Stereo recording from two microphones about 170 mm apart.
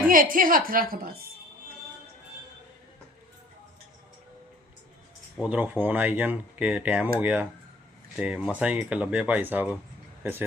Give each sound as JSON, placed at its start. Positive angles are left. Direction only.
{"t": 0.1, "sound": "a woman's voice", "side_deg": -55}
{"t": 5.4, "sound": "speech", "side_deg": -5}